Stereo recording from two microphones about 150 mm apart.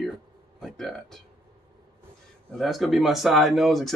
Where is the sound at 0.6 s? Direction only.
Centre (ahead or behind).